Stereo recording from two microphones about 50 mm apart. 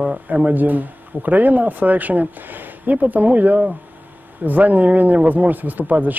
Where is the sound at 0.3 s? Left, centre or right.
Right.